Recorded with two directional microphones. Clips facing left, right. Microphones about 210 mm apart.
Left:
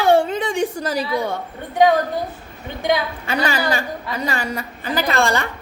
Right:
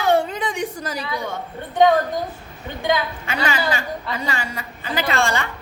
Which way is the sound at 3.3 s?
35° left (ahead or behind).